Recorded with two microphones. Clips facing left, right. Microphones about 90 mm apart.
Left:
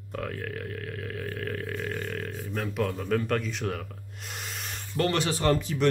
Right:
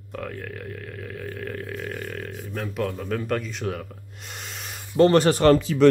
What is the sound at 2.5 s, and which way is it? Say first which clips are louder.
Speech: right 1 dB; centre (ahead or behind).